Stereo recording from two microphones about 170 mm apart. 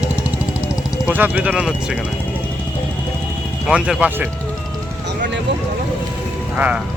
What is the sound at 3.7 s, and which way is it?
Speech, 5° right (ahead or behind).